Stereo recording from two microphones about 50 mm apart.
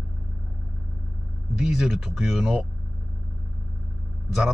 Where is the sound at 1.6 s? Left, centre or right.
Centre.